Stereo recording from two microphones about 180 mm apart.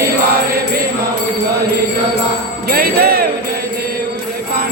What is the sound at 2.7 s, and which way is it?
Music, 60° right (ahead or behind).